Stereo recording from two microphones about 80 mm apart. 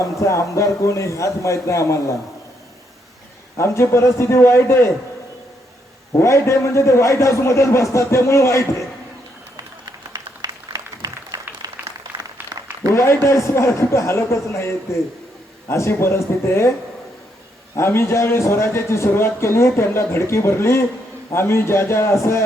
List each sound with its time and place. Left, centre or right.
0.0 s a man's voice: left
3.6 s a man's voice: left
6.1 s a man's voice: left
10.1 s applause: right
12.9 s a man's voice: left
17.7 s a man's voice: left